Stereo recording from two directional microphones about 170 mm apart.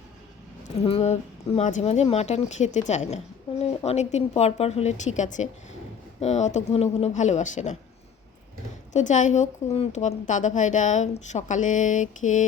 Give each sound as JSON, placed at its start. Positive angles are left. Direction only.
{"t": 0.9, "sound": "a woman's voice", "side_deg": 40}
{"t": 8.9, "sound": "a woman's voice", "side_deg": 45}